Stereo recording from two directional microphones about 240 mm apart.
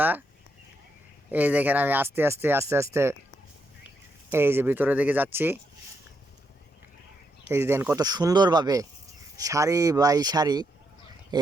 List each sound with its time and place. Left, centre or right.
1.3 s speech: centre
7.4 s speech: centre